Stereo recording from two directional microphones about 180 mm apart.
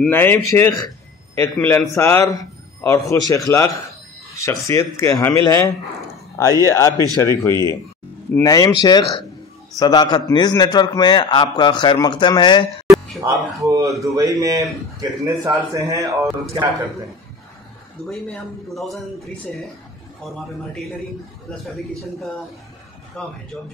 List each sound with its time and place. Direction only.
0.0 s a man's voice: 10° left (ahead or behind)
12.8 s music: centre (ahead or behind)
13.2 s a man's voice: 20° right (ahead or behind)
18.0 s a man's voice: centre (ahead or behind)
20.2 s a man's voice: centre (ahead or behind)